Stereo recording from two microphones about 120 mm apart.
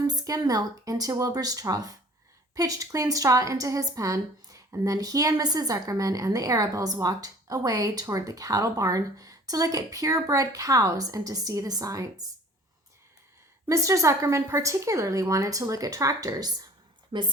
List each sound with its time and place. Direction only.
0.1 s a woman's voice: 30° right (ahead or behind)
13.7 s a woman's voice: 25° right (ahead or behind)
17.1 s a woman's voice: 45° right (ahead or behind)